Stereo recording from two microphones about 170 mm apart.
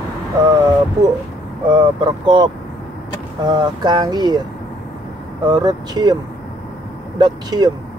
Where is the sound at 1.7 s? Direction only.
25° right (ahead or behind).